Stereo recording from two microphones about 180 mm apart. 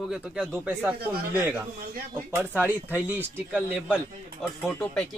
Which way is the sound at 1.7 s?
55° right (ahead or behind).